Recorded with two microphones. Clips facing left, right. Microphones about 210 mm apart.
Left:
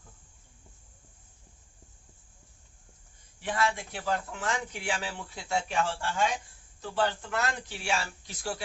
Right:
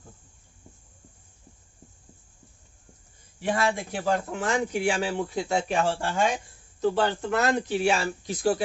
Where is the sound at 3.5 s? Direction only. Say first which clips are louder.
Right 4 dB; 45° right (ahead or behind).